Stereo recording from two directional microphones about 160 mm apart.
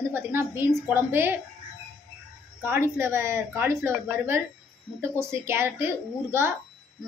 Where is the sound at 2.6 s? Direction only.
15° right (ahead or behind).